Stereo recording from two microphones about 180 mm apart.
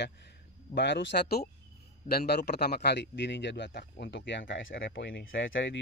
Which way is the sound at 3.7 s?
65° left (ahead or behind).